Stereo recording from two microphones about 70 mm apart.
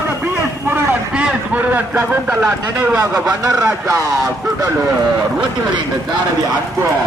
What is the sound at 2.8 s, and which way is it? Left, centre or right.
Speech, centre.